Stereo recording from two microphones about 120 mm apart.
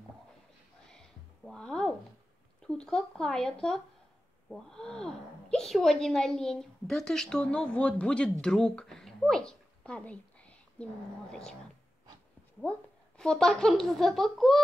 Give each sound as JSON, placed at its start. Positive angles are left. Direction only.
{"t": 0.8, "sound": "a sound", "side_deg": 5}
{"t": 2.6, "sound": "speech", "side_deg": 5}
{"t": 13.2, "sound": "speech", "side_deg": 5}